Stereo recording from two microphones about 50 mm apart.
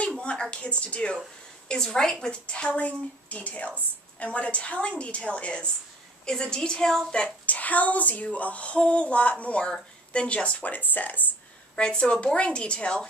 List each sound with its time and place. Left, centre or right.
0.2 s speech: left
1.7 s a woman's voice: centre
2.4 s a woman's voice: left
7.4 s speech: left
11.7 s speech: centre